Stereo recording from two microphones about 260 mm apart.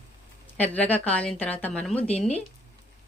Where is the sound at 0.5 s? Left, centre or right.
Centre.